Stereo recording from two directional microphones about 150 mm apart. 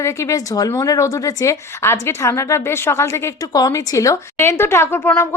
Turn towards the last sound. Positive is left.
turn(degrees=15)  # may be behind; listen again after turning